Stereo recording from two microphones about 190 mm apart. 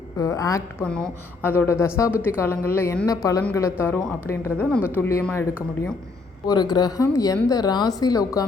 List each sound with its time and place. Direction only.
0.2 s a woman's voice: 15° left (ahead or behind)